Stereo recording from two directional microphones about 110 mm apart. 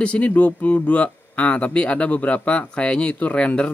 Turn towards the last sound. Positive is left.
turn(degrees=10)  # may be behind; listen again after turning